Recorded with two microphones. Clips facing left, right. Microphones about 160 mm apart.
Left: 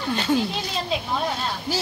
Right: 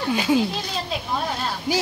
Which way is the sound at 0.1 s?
10° right (ahead or behind).